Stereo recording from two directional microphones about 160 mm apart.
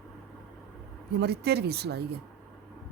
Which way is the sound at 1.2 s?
90° right.